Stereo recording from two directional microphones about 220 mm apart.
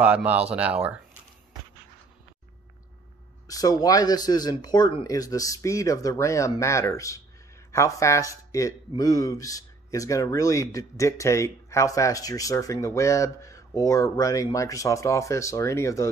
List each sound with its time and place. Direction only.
0.0 s speech: 5° right (ahead or behind)
3.4 s a man's voice: 15° left (ahead or behind)